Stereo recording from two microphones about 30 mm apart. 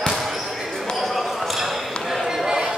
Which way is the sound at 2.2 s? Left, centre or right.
Centre.